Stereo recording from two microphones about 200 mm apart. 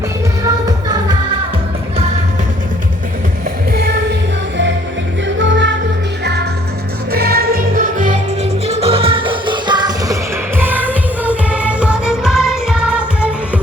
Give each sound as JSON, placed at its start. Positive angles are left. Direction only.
{"t": 5.4, "sound": "music", "side_deg": -65}
{"t": 10.6, "sound": "music", "side_deg": -10}